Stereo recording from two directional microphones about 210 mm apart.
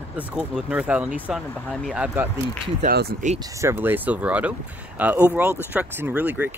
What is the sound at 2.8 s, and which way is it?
Speech, 45° right (ahead or behind).